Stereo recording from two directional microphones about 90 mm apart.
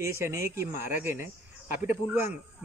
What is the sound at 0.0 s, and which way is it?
Speech, 30° right (ahead or behind).